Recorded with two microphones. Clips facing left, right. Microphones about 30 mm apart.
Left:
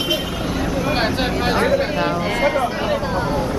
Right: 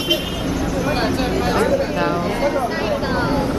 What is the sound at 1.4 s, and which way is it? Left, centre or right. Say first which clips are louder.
Speech: even; centre.